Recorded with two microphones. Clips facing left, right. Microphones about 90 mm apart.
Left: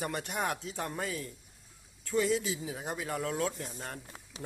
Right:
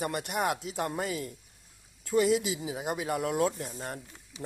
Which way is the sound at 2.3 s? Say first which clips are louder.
Right 3 dB; 10° right (ahead or behind).